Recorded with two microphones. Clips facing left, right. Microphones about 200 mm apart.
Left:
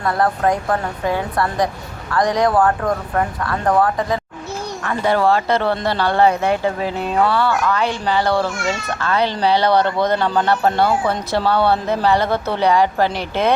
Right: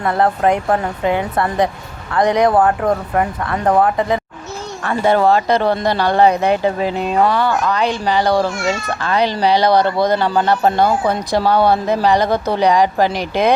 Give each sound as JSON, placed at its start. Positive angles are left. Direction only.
{"t": 0.0, "sound": "a woman's voice", "side_deg": -20}